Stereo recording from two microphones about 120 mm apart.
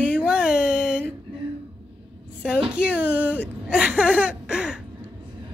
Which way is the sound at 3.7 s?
10° right (ahead or behind).